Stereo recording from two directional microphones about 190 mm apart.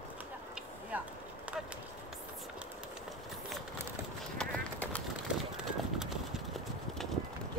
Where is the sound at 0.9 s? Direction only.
10° right (ahead or behind).